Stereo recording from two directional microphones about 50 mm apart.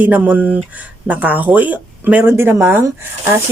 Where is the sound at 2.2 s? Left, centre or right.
Right.